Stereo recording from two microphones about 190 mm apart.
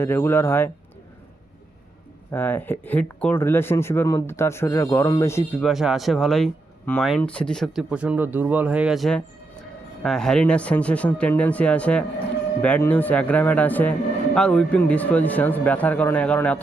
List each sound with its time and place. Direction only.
0.0 s speech: 10° left (ahead or behind)
2.3 s speech: 10° left (ahead or behind)
5.6 s speech: centre (ahead or behind)